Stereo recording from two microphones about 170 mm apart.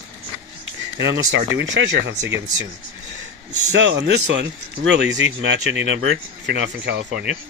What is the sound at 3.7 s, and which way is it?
Speech, 90° right.